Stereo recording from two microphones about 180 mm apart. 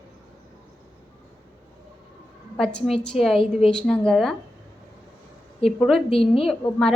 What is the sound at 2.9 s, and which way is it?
A woman's voice, centre (ahead or behind).